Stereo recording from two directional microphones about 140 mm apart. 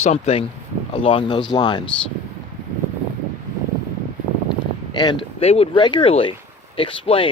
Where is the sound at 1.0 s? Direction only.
35° left (ahead or behind).